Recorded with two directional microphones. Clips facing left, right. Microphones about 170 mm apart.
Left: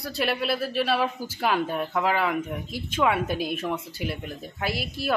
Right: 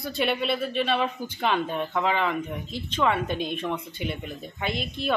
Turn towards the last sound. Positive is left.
turn(degrees=5)  # may be behind; listen again after turning